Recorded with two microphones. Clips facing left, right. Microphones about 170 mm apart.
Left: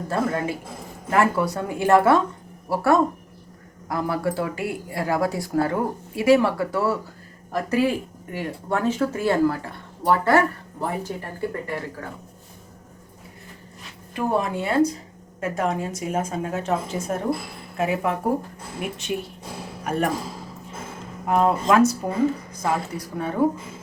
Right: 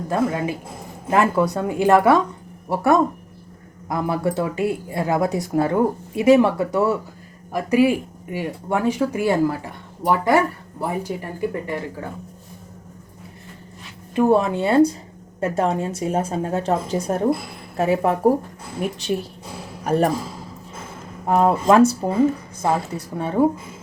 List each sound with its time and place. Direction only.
0.1 s speech: 15° right (ahead or behind)
14.2 s a man's voice: 25° right (ahead or behind)
21.2 s speech: 30° right (ahead or behind)